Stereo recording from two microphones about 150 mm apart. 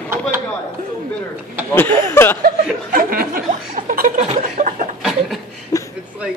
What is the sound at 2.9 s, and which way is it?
Chuckle, 80° right.